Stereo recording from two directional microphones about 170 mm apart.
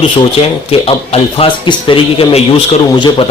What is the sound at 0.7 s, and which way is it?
Speech, 35° left (ahead or behind).